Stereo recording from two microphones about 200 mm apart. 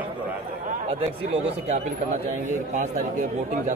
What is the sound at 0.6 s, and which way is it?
Speech, 30° right (ahead or behind).